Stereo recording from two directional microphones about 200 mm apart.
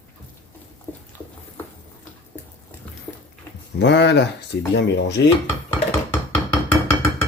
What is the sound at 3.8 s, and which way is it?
Speech, 60° left (ahead or behind).